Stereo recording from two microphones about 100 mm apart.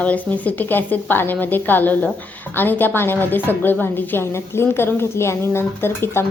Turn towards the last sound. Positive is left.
turn(degrees=25)  # may be behind; listen again after turning